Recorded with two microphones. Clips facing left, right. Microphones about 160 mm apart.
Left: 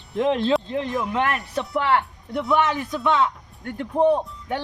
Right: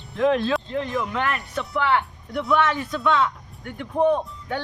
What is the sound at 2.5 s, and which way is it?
Speech, 15° left (ahead or behind).